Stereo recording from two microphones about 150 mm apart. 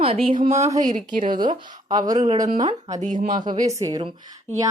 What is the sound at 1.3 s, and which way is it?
Speech, 30° right (ahead or behind).